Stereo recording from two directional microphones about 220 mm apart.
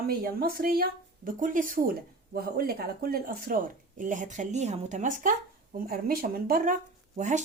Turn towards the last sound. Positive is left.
turn(degrees=-35)  # may be behind; listen again after turning